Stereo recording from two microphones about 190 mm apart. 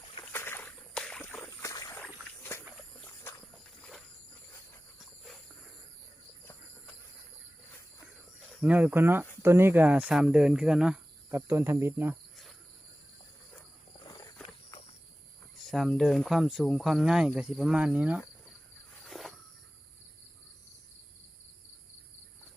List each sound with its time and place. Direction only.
0.2 s rowboat: 10° left (ahead or behind)
1.5 s boat: 20° left (ahead or behind)
2.4 s a sound: 15° left (ahead or behind)
3.8 s a sound: 5° left (ahead or behind)
6.4 s cricket: 10° left (ahead or behind)
8.6 s speech: 10° right (ahead or behind)
14.4 s walk: 25° left (ahead or behind)
15.5 s speech: centre (ahead or behind)
19.0 s a sound: centre (ahead or behind)